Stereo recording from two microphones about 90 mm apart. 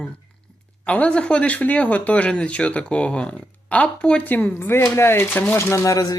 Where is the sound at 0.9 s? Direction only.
15° left (ahead or behind).